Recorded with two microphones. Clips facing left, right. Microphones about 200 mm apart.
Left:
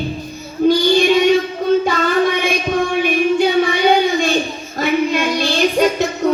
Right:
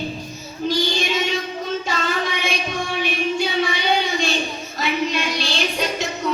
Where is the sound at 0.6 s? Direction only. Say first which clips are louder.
Left 10 dB; 50° left (ahead or behind).